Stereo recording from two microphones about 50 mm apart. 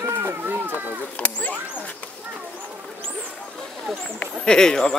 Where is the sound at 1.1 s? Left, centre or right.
Left.